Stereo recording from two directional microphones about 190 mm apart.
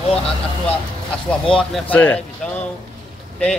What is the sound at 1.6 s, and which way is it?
A man's voice, 5° left (ahead or behind).